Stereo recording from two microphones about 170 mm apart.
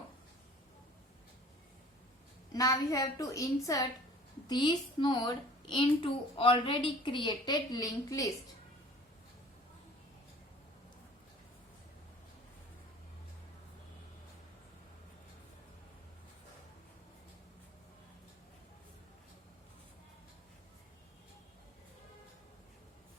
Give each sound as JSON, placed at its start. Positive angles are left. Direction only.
{"t": 2.5, "sound": "a woman's voice", "side_deg": 20}